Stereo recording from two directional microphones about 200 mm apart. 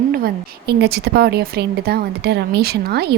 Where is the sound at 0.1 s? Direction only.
50° right (ahead or behind).